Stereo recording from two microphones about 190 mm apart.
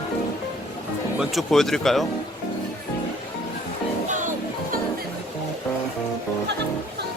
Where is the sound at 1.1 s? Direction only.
Centre (ahead or behind).